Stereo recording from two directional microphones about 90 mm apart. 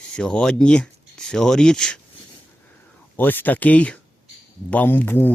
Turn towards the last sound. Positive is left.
turn(degrees=20)  # may be behind; listen again after turning